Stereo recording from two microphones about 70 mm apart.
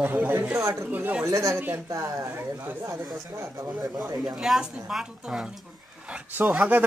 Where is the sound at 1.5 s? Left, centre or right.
Right.